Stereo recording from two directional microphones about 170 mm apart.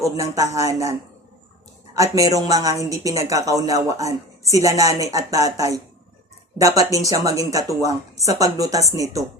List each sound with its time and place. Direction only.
0.0 s speech: 20° right (ahead or behind)